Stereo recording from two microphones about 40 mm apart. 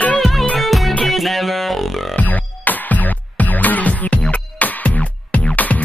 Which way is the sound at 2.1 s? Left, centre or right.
Left.